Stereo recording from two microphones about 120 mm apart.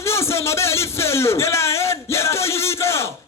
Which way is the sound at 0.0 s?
20° left (ahead or behind).